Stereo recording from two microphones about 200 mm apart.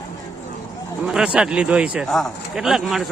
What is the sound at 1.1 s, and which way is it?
A man's voice, 5° right (ahead or behind).